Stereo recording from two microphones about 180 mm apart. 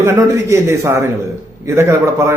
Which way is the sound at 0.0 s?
15° right (ahead or behind).